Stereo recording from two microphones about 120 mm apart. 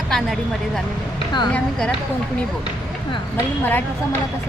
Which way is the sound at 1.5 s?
10° left (ahead or behind).